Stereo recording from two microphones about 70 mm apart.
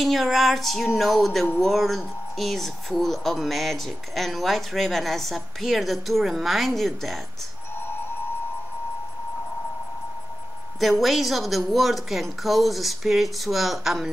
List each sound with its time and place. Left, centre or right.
0.0 s speech: centre
7.8 s music: left
10.8 s speech: centre